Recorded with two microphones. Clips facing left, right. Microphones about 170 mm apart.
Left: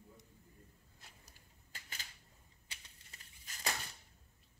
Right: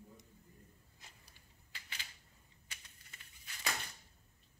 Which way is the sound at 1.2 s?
45° left (ahead or behind).